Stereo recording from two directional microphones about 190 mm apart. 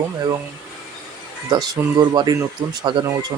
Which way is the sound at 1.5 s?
20° right (ahead or behind).